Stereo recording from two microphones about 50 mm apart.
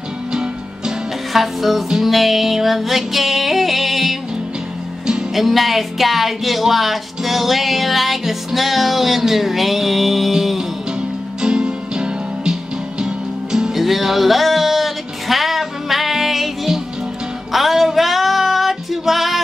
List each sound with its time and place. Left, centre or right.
0.3 s music: centre
1.3 s speech: centre
5.3 s speech: centre
11.0 s music: centre